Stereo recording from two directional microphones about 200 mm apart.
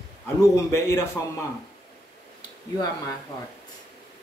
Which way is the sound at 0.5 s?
15° left (ahead or behind).